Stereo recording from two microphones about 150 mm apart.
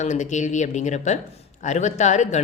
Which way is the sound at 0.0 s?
55° left (ahead or behind).